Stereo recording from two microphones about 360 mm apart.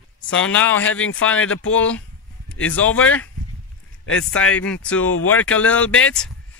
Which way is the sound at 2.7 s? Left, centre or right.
Centre.